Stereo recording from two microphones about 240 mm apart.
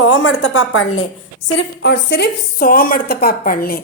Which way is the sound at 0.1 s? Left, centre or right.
Left.